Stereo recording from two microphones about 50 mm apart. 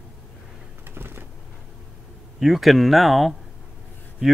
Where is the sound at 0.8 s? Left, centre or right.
Right.